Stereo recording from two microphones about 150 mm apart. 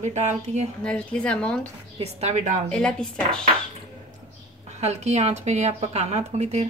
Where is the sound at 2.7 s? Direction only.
5° left (ahead or behind).